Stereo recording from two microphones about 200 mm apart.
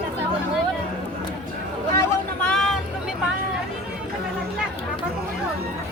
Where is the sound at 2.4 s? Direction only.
5° left (ahead or behind).